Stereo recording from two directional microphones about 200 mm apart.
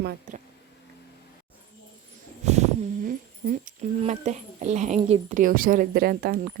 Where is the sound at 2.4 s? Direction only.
35° right (ahead or behind).